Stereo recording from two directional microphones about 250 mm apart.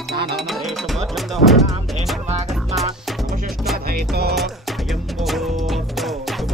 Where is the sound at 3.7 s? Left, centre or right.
Right.